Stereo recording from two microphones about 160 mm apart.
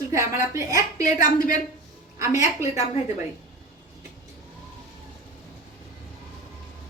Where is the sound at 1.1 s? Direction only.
55° left (ahead or behind).